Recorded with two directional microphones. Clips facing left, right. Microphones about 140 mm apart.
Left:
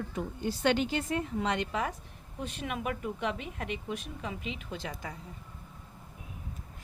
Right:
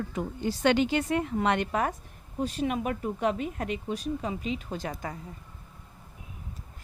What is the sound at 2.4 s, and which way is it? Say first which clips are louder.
Speech: right 7 dB; 35° right (ahead or behind).